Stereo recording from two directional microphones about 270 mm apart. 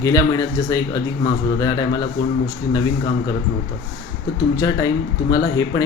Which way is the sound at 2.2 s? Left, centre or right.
Left.